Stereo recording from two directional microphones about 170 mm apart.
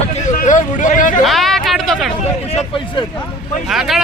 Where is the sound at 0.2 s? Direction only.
45° left (ahead or behind).